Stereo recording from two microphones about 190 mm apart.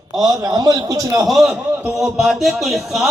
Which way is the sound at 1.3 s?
Centre (ahead or behind).